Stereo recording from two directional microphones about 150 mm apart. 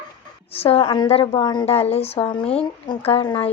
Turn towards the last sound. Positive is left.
turn(degrees=35)  # may be behind; listen again after turning